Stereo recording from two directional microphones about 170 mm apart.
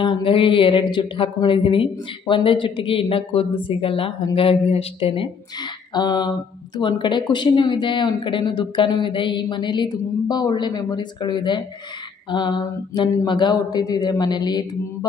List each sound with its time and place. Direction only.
0.0 s speech: 30° left (ahead or behind)